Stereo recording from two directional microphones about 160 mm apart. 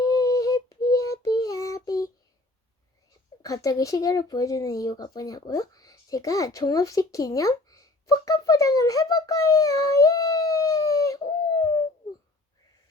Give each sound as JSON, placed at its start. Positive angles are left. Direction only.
{"t": 0.0, "sound": "a sound", "side_deg": 20}
{"t": 0.9, "sound": "child singing", "side_deg": 20}
{"t": 3.4, "sound": "speech", "side_deg": 20}